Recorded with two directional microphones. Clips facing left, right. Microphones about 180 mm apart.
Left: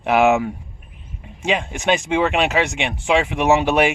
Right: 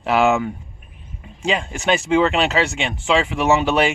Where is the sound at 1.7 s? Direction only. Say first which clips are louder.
Right 3 dB; 15° left (ahead or behind).